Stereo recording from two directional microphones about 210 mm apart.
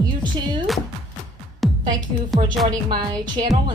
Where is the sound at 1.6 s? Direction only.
Centre (ahead or behind).